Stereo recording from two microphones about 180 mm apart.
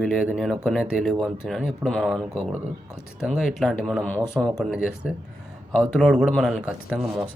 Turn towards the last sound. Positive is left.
turn(degrees=-5)  # may be behind; listen again after turning